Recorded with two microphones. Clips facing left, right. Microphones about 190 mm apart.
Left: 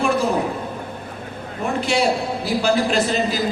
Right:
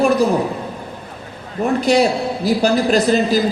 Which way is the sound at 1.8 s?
40° right (ahead or behind).